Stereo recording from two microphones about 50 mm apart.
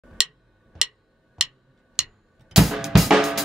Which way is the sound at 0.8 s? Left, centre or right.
Centre.